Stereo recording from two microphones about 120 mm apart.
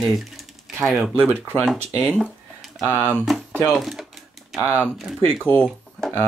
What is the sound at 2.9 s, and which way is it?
Speech, 15° left (ahead or behind).